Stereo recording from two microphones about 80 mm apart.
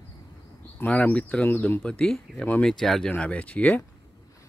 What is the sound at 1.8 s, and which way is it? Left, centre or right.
Speech, centre.